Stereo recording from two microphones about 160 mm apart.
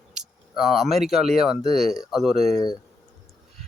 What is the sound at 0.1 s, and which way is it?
Speech, centre (ahead or behind).